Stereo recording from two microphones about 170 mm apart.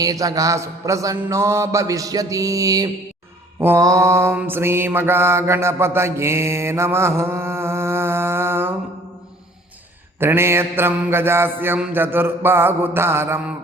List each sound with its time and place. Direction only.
0.0 s mantra: 20° right (ahead or behind)
10.2 s mantra: 15° right (ahead or behind)